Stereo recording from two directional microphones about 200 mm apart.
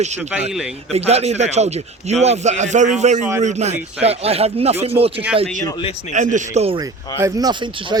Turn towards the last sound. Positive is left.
turn(degrees=-25)  # may be behind; listen again after turning